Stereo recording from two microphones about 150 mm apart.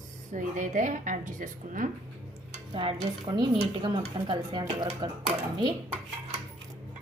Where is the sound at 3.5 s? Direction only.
40° right (ahead or behind).